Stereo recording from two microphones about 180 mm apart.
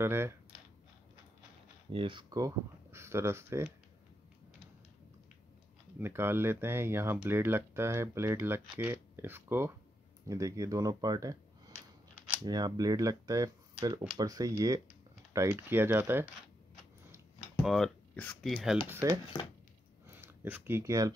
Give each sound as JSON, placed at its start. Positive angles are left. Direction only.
{"t": 0.0, "sound": "speech", "side_deg": -15}
{"t": 1.9, "sound": "speech", "side_deg": -30}
{"t": 5.9, "sound": "speech", "side_deg": -10}
{"t": 17.6, "sound": "speech", "side_deg": 0}
{"t": 19.0, "sound": "speech", "side_deg": -15}